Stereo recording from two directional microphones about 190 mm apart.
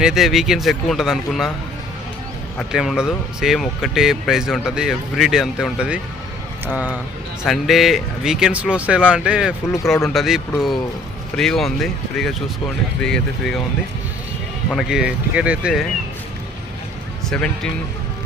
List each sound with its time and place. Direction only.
0.0 s speech: centre (ahead or behind)
2.6 s speech: centre (ahead or behind)
14.7 s speech: centre (ahead or behind)
17.2 s speech: 5° left (ahead or behind)